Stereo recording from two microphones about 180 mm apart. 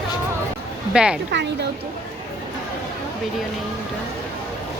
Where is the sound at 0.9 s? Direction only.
5° right (ahead or behind).